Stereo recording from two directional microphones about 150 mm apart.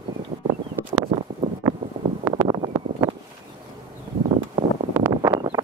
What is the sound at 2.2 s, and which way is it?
Wind noise, 30° right (ahead or behind).